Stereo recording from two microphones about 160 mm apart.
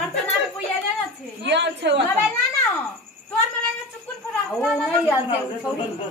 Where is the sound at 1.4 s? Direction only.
90° right.